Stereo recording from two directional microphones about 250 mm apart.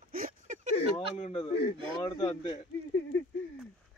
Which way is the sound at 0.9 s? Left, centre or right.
Left.